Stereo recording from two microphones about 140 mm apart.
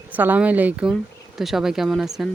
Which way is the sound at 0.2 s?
10° right (ahead or behind).